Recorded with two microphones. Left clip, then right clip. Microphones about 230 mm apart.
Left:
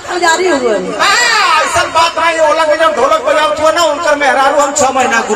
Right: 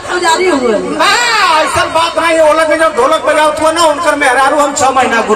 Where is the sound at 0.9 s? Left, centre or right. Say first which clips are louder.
Even; right.